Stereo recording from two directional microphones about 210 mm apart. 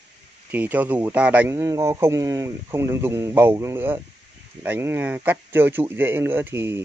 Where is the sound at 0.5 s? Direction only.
10° right (ahead or behind).